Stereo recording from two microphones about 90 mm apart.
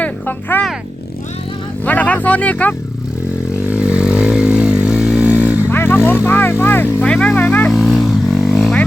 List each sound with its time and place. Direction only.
0.0 s music: 20° left (ahead or behind)
1.8 s speech: 15° left (ahead or behind)
3.7 s vehicle: 10° right (ahead or behind)
5.7 s vehicle: 25° left (ahead or behind)
7.1 s vehicle: 10° left (ahead or behind)
7.7 s vehicle: centre (ahead or behind)